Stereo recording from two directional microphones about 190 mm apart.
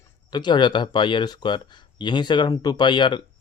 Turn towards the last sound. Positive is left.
turn(degrees=25)  # may be behind; listen again after turning